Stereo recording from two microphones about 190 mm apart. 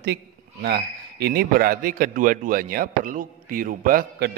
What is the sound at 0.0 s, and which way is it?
A man's voice, 60° right (ahead or behind).